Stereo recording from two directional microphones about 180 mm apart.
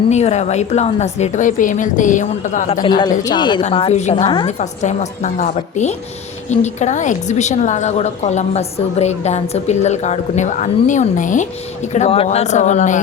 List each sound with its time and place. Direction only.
0.1 s a woman's voice: 40° left (ahead or behind)
2.8 s a woman's voice: 25° left (ahead or behind)
4.1 s speech: 25° left (ahead or behind)
4.4 s a woman's voice: 40° left (ahead or behind)
11.9 s a woman's voice: 35° left (ahead or behind)